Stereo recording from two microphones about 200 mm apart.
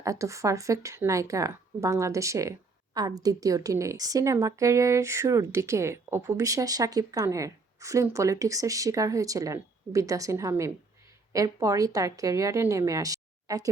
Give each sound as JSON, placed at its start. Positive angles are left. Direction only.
{"t": 0.0, "sound": "speech", "side_deg": -15}